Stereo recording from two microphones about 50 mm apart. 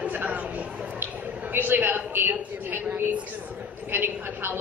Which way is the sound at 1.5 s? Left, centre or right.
Right.